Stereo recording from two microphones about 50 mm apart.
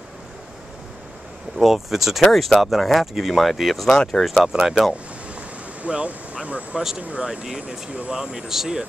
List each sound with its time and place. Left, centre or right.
1.6 s speech: centre
2.2 s speech: centre
3.9 s speech: centre
4.5 s speech: centre
5.3 s vehicle: right
7.0 s speech: right
7.2 s speech: centre